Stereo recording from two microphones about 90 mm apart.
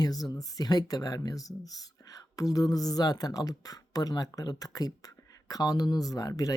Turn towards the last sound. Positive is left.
turn(degrees=40)  # may be behind; listen again after turning